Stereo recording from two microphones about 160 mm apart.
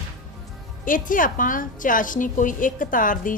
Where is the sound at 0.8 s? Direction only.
55° left (ahead or behind).